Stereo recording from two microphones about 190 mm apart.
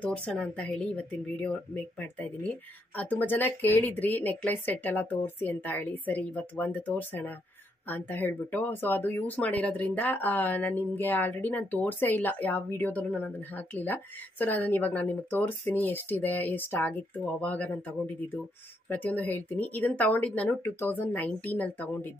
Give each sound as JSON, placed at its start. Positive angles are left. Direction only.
{"t": 0.0, "sound": "speech", "side_deg": 5}